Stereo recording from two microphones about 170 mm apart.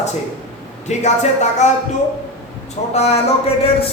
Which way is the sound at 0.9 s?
40° left (ahead or behind).